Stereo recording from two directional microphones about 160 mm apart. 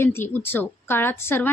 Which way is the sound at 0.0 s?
15° left (ahead or behind).